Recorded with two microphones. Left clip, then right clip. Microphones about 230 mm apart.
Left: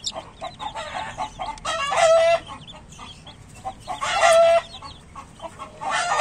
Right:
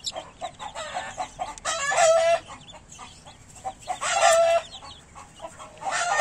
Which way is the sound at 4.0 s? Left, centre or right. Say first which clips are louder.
Left 4 dB; right.